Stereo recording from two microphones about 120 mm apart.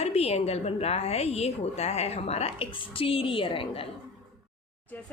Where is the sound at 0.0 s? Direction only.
60° left (ahead or behind).